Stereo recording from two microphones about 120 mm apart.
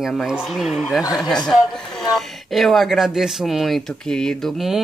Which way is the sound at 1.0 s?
35° left (ahead or behind).